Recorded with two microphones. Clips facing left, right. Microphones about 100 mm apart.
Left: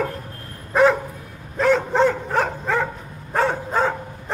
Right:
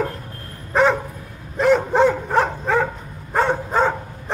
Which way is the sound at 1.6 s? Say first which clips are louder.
Right 2 dB; 10° right (ahead or behind).